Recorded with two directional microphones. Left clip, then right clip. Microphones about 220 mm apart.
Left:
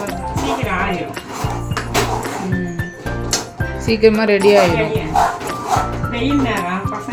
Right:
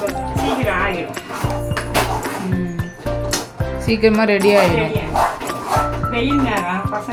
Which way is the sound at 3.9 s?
5° left (ahead or behind).